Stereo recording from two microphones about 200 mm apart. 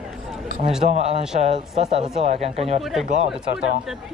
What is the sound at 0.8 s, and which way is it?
Speech, 35° right (ahead or behind).